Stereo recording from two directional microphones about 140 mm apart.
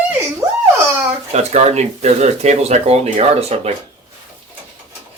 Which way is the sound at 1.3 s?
55° right (ahead or behind).